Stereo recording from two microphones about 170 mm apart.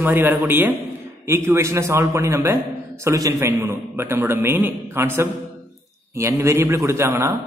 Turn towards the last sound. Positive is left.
turn(degrees=-15)  # may be behind; listen again after turning